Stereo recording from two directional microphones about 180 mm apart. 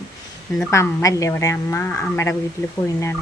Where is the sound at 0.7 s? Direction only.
15° left (ahead or behind).